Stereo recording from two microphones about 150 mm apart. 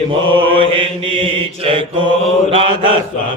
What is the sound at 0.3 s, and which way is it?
Mantra, 35° right (ahead or behind).